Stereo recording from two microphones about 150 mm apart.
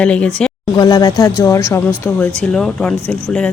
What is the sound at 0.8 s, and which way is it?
Speech, 25° left (ahead or behind).